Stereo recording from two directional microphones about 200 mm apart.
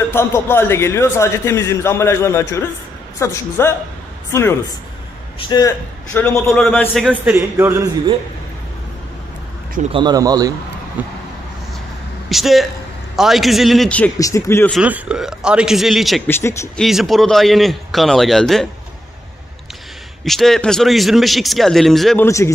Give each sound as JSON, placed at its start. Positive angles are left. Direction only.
{"t": 0.1, "sound": "a man's voice", "side_deg": 10}
{"t": 7.3, "sound": "a man's voice", "side_deg": -15}
{"t": 9.9, "sound": "a man's voice", "side_deg": -20}
{"t": 12.3, "sound": "a man's voice", "side_deg": 0}
{"t": 14.7, "sound": "speech", "side_deg": -5}
{"t": 16.3, "sound": "a man's voice", "side_deg": 10}
{"t": 16.8, "sound": "speech", "side_deg": 0}
{"t": 20.2, "sound": "speech", "side_deg": 0}
{"t": 22.2, "sound": "a man's voice", "side_deg": 15}